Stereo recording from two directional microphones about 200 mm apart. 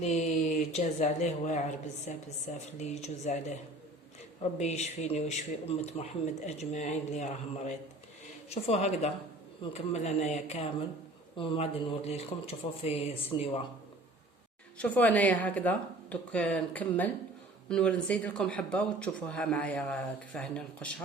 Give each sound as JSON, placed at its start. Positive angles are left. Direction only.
{"t": 0.0, "sound": "a man's voice", "side_deg": 35}
{"t": 14.8, "sound": "speech", "side_deg": 5}